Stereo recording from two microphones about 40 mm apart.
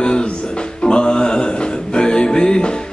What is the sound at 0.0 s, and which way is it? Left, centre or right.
Music, left.